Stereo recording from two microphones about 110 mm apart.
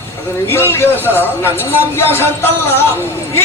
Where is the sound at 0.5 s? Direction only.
20° left (ahead or behind).